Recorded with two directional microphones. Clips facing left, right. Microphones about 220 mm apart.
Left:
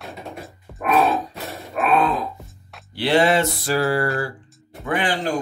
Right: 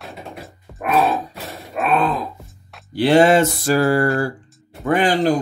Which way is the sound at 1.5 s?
Centre (ahead or behind).